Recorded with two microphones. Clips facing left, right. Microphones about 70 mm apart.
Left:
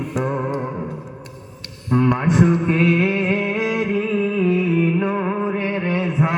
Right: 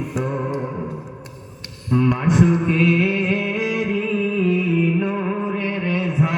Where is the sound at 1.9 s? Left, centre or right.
Left.